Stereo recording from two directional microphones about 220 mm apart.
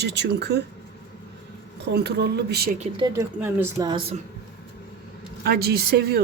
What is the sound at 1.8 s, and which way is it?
Speech, 50° right (ahead or behind).